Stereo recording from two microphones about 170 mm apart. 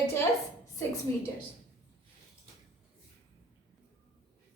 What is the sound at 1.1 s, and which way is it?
Speech, 15° left (ahead or behind).